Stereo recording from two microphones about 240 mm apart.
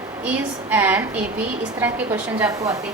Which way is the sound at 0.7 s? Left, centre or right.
Centre.